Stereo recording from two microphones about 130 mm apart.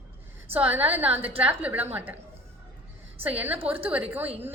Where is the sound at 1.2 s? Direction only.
45° right (ahead or behind).